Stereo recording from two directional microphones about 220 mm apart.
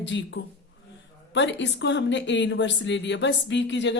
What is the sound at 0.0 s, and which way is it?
Speech, 55° left (ahead or behind).